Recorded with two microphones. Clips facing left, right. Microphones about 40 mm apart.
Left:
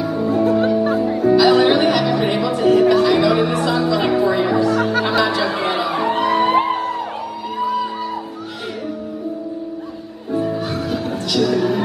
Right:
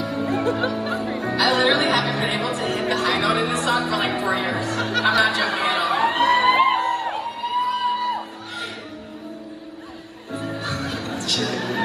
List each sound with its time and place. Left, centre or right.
0.1 s music: right
10.3 s music: right